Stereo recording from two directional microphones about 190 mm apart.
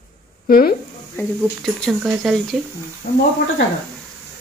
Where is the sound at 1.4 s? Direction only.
Centre (ahead or behind).